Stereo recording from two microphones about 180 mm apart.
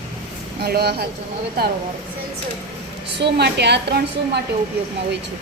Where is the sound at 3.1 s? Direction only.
65° right (ahead or behind).